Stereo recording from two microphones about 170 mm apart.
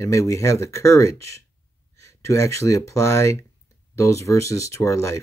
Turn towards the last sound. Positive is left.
turn(degrees=20)  # may be behind; listen again after turning